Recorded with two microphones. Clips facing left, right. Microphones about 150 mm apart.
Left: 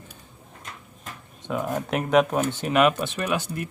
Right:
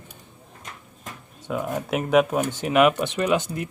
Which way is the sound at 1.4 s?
Centre (ahead or behind).